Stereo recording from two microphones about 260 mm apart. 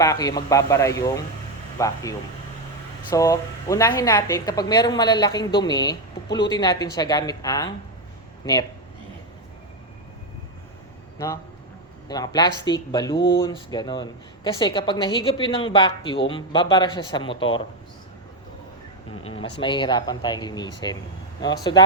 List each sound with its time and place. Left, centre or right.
0.0 s a woman's voice: centre
3.1 s a woman's voice: centre
12.0 s a woman's voice: centre
19.2 s a woman's voice: centre